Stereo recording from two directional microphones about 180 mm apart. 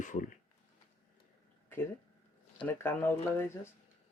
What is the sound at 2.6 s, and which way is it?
Speech, 10° left (ahead or behind).